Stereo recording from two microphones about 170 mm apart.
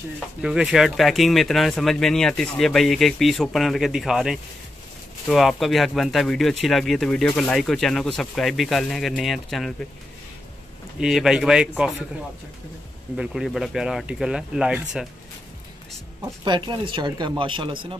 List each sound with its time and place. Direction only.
0.4 s speech: 5° right (ahead or behind)
11.0 s speech: 5° right (ahead or behind)
13.1 s speech: 5° right (ahead or behind)
16.4 s speech: 30° right (ahead or behind)